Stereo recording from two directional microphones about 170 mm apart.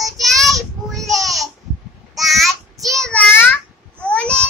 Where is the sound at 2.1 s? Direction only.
Centre (ahead or behind).